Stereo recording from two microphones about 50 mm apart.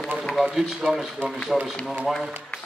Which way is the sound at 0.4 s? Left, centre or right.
Centre.